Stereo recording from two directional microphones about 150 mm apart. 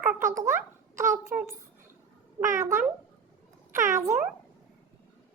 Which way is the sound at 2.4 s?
40° right (ahead or behind).